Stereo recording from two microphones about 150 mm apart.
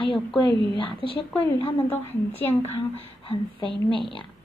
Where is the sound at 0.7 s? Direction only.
35° left (ahead or behind).